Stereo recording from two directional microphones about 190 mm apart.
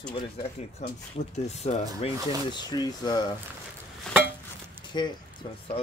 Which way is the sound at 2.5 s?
20° left (ahead or behind).